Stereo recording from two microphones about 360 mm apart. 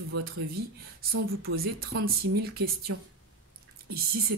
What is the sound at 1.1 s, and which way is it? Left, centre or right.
Speech, right.